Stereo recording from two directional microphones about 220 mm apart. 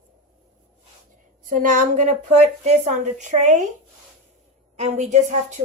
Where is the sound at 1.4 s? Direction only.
35° right (ahead or behind).